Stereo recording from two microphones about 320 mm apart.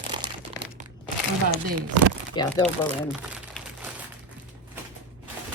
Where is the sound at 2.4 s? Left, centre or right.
Centre.